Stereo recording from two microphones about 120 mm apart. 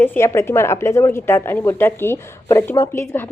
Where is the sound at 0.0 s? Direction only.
20° left (ahead or behind).